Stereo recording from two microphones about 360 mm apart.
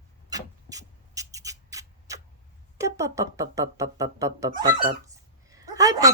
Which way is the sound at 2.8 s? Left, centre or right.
Centre.